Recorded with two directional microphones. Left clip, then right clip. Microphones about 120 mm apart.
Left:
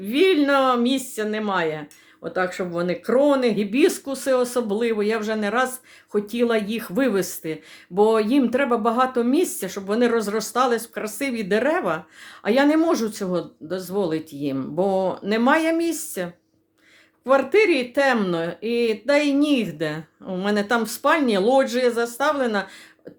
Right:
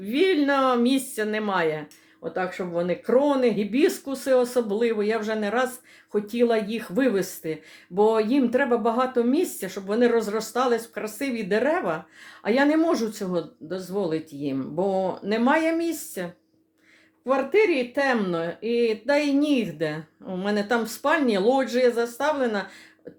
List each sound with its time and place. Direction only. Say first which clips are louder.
0.0 s a woman's voice: left 3 dB; 25° left (ahead or behind)
2.3 s speech: left 3 dB; 35° left (ahead or behind)
17.2 s speech: left 4 dB; 40° left (ahead or behind)